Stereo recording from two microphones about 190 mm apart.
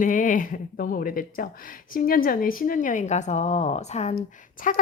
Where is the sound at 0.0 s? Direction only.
45° left (ahead or behind).